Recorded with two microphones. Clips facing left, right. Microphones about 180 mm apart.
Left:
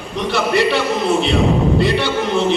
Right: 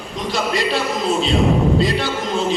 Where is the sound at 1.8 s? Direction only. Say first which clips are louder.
Left 3 dB; 70° left (ahead or behind).